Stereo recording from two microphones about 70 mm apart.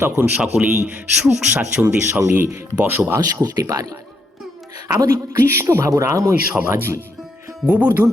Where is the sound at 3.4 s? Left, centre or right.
Right.